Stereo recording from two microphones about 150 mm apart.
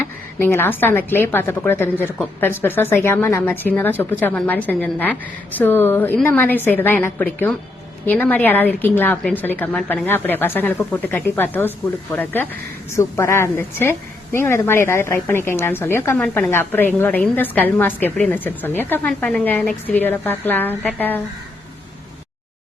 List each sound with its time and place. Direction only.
0.3 s a woman's voice: 15° left (ahead or behind)